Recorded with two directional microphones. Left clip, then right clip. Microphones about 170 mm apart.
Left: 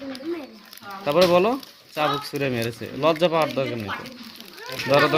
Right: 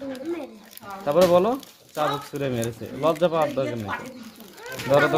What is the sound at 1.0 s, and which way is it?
Speech, 20° left (ahead or behind).